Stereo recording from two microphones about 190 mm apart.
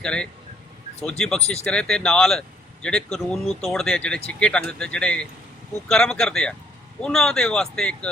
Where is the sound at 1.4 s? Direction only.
35° left (ahead or behind).